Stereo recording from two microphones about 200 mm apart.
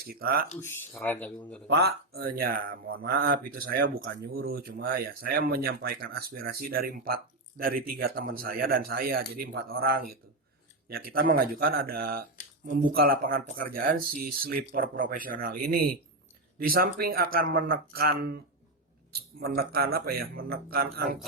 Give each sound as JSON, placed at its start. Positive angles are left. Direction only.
{"t": 0.1, "sound": "speech", "side_deg": -50}
{"t": 0.6, "sound": "speech", "side_deg": 10}
{"t": 1.6, "sound": "speech", "side_deg": -55}